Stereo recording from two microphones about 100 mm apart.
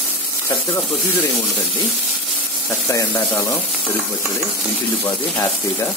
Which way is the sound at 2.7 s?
30° left (ahead or behind).